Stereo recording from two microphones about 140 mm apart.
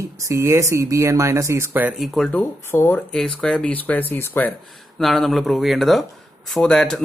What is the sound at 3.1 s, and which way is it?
Speech, 5° left (ahead or behind).